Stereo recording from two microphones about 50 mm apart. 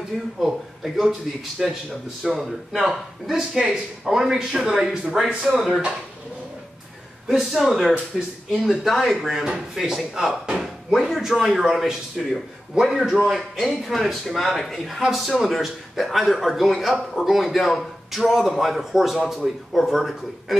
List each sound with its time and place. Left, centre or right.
0.4 s a man's voice: centre
7.2 s a man's voice: centre
12.9 s speech: centre
13.3 s a man's voice: centre